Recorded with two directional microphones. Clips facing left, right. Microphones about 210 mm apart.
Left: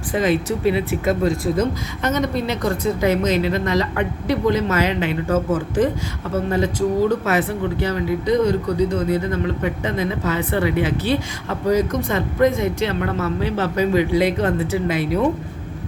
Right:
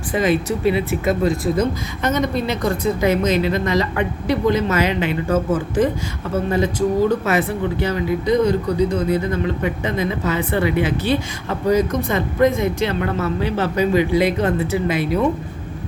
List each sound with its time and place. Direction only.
0.1 s speech: 10° right (ahead or behind)
2.0 s speech: 15° right (ahead or behind)